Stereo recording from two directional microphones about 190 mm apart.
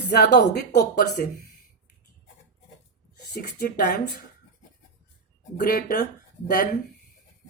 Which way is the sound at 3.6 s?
55° left (ahead or behind).